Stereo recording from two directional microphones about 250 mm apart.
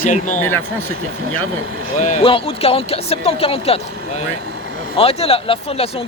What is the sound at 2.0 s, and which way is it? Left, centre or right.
Speech, left.